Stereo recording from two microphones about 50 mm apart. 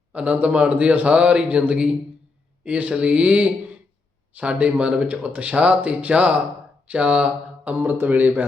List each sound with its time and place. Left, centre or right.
0.1 s speech: right